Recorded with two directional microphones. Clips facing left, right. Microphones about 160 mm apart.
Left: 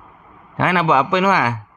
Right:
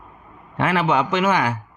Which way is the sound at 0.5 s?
90° left.